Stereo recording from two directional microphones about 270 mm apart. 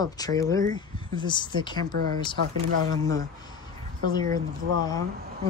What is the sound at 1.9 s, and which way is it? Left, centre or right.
Speech, right.